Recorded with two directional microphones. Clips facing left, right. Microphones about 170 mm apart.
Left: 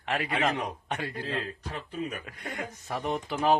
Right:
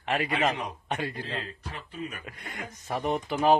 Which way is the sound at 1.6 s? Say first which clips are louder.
Left 4 dB; 45° left (ahead or behind).